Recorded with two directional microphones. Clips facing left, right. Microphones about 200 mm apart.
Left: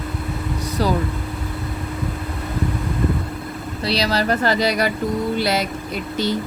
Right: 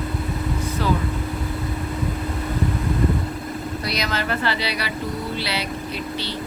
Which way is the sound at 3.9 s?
35° left (ahead or behind).